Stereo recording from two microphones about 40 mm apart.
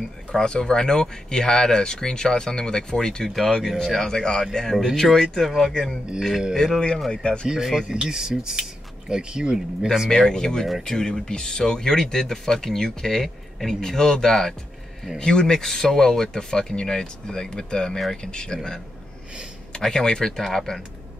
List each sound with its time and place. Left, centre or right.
0.3 s speech: centre
3.3 s speech: centre
4.7 s speech: centre
7.1 s speech: left
7.4 s speech: centre
10.0 s speech: centre
19.9 s speech: centre